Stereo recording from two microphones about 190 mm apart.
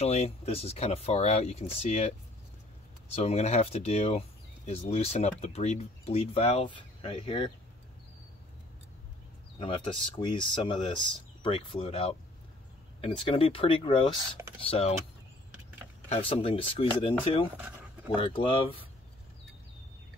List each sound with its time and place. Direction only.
0.0 s speech: 35° left (ahead or behind)
3.2 s speech: 35° left (ahead or behind)
9.6 s speech: 25° left (ahead or behind)
16.1 s speech: 30° left (ahead or behind)